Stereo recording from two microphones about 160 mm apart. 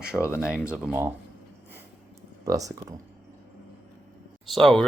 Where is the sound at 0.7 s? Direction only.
10° right (ahead or behind).